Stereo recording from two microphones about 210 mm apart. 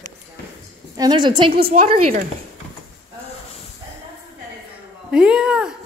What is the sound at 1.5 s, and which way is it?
Speech, 45° right (ahead or behind).